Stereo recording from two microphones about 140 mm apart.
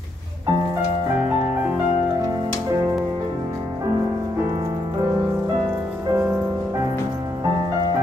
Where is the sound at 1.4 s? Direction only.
15° right (ahead or behind).